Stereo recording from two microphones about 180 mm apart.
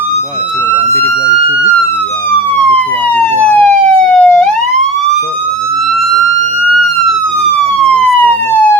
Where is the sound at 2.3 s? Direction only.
10° left (ahead or behind).